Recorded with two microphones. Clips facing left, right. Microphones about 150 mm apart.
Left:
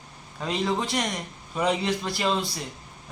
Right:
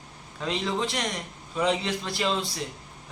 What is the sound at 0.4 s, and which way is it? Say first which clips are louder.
A man's voice: left 1 dB; 5° left (ahead or behind).